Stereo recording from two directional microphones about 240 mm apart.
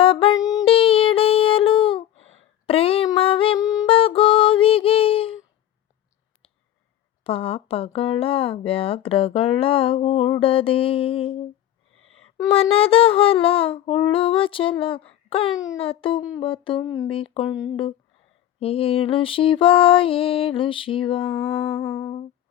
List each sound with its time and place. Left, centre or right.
0.0 s music: left
0.4 s a sound: centre
7.3 s speech: left
12.5 s speech: left
16.8 s speech: centre
17.1 s speech: left
18.6 s speech: left
21.8 s humming: centre